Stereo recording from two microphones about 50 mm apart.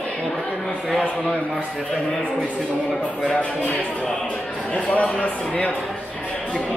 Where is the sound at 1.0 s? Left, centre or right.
Left.